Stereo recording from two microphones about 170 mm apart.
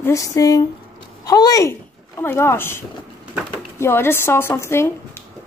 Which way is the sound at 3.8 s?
15° left (ahead or behind).